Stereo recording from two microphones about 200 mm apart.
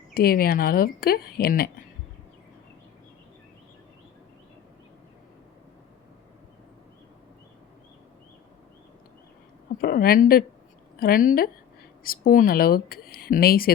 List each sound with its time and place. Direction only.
0.1 s a woman's voice: 50° left (ahead or behind)
9.8 s a woman's voice: 50° left (ahead or behind)